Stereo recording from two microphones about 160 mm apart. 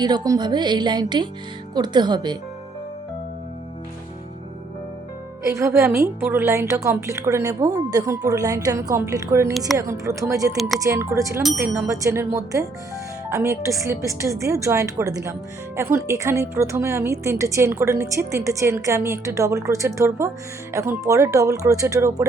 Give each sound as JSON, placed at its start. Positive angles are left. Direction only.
{"t": 0.0, "sound": "a woman's voice", "side_deg": -25}
{"t": 5.5, "sound": "a woman's voice", "side_deg": -20}